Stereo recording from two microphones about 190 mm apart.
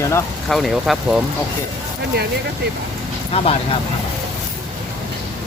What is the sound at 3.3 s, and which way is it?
Speech, 30° left (ahead or behind).